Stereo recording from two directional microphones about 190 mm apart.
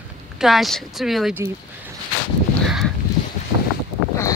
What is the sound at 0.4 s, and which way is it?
Speech, centre (ahead or behind).